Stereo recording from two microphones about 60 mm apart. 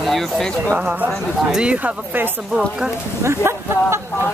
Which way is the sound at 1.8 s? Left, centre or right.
Right.